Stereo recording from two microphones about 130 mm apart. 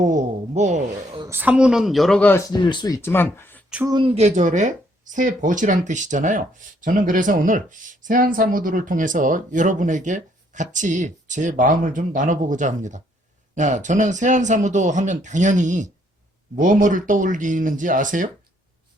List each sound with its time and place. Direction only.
0.0 s speech: 75° right (ahead or behind)
1.3 s speech: 15° right (ahead or behind); by 2.4 s 10° left (ahead or behind)
2.4 s speech: 35° left (ahead or behind)
3.0 s speech: 15° left (ahead or behind)
4.0 s speech: 55° right (ahead or behind); by 6.4 s 75° right (ahead or behind)
6.8 s speech: 90° right; by 15.9 s 70° right (ahead or behind)
16.6 s speech: 90° right